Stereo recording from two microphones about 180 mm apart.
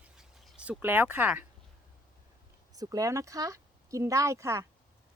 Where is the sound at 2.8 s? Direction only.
20° right (ahead or behind).